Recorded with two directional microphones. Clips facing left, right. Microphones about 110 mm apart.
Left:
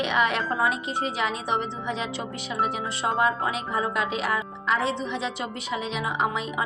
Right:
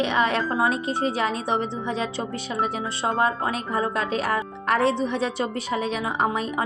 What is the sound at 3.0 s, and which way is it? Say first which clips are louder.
Speech: right 1 dB; 35° right (ahead or behind).